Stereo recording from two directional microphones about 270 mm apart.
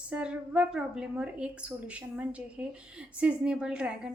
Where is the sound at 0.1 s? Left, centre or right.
Centre.